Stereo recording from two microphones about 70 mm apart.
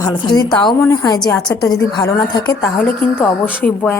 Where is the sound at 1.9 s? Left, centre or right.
Left.